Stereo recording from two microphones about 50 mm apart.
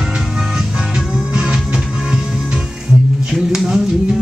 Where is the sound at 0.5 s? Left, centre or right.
Centre.